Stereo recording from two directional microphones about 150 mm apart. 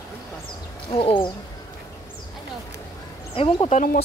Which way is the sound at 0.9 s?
35° left (ahead or behind).